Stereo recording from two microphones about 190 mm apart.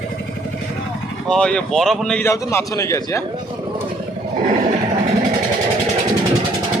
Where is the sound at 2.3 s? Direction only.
15° left (ahead or behind).